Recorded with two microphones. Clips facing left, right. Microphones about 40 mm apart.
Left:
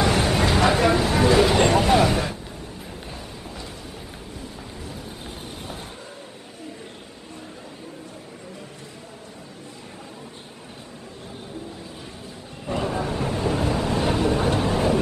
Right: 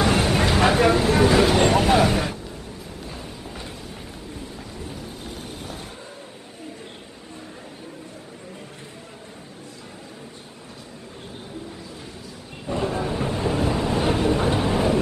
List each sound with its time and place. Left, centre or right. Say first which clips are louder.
0.0 s vehicle: right 1 dB; centre
12.8 s vehicle: right 1 dB; centre
13.2 s train: right 1 dB; centre